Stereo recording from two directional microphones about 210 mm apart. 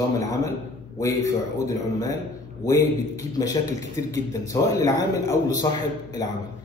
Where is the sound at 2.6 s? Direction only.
15° left (ahead or behind).